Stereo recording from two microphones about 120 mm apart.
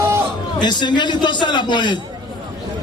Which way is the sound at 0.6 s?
40° left (ahead or behind).